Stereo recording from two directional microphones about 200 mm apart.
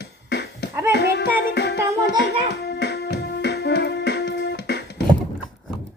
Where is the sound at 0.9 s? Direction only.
55° left (ahead or behind).